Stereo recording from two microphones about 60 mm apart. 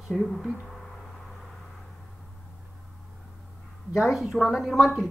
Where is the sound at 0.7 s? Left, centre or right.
Centre.